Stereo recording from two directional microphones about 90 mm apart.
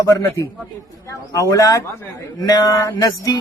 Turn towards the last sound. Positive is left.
turn(degrees=40)  # may be behind; listen again after turning